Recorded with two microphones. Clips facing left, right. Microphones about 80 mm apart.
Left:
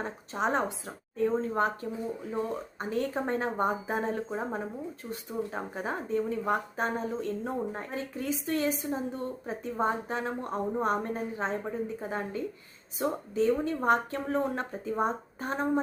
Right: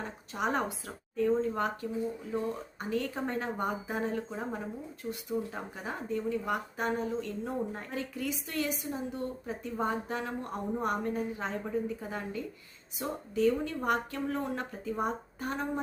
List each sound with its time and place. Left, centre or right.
0.0 s a woman's voice: left
5.3 s speech: left
5.7 s a woman's voice: left